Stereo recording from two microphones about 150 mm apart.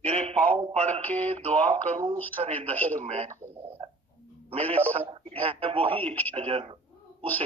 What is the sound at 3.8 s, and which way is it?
Cat, 40° right (ahead or behind).